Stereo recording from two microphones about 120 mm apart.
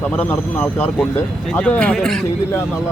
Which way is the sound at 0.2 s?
10° left (ahead or behind).